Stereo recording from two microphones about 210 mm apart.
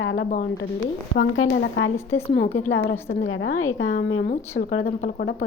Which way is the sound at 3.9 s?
40° left (ahead or behind).